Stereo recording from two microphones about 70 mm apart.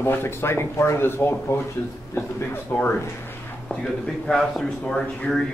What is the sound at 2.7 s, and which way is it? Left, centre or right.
Speech, left.